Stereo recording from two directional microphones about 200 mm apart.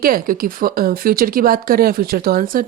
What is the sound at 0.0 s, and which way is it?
Speech, 45° right (ahead or behind).